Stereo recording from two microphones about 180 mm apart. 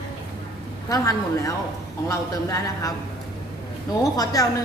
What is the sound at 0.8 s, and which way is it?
A woman's voice, 20° left (ahead or behind).